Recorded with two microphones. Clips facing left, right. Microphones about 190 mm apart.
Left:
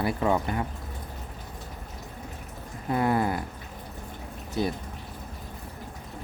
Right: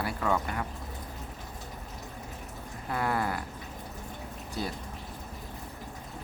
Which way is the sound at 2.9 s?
20° left (ahead or behind).